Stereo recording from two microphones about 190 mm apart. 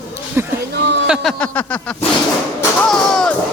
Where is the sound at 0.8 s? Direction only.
65° right (ahead or behind).